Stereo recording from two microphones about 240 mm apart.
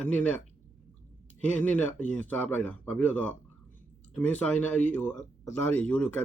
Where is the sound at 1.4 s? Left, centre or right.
Centre.